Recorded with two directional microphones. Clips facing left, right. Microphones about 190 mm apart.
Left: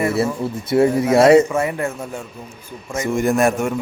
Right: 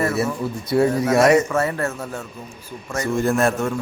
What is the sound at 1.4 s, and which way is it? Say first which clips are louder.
A man's voice: left 1 dB; 15° left (ahead or behind).